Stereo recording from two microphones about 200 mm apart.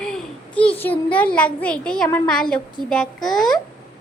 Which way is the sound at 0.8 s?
10° left (ahead or behind).